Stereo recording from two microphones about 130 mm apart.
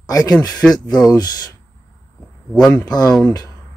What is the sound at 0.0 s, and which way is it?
Speech, 30° left (ahead or behind).